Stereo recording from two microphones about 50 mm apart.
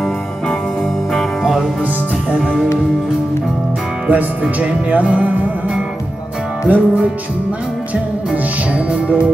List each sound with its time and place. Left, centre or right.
4.1 s speech: right
6.7 s music: right
8.7 s speech: right